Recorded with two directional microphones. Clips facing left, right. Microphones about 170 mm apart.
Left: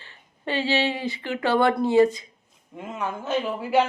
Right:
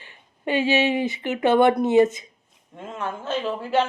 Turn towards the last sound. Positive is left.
turn(degrees=10)  # may be behind; listen again after turning